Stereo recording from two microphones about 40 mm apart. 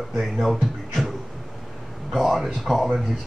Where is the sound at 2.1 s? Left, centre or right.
Centre.